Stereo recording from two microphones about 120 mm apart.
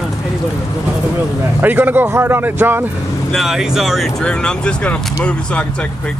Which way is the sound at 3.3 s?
Centre (ahead or behind).